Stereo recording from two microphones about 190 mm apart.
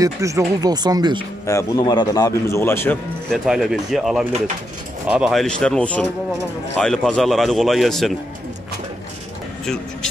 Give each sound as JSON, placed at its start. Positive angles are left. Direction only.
{"t": 0.0, "sound": "speech", "side_deg": -15}
{"t": 1.4, "sound": "a man's voice", "side_deg": 15}
{"t": 3.4, "sound": "speech", "side_deg": 0}